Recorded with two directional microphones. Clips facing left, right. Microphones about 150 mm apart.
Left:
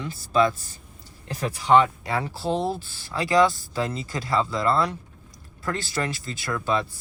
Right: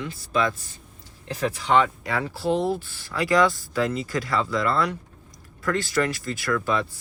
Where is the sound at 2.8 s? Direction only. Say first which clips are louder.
Right 1 dB; 30° left (ahead or behind).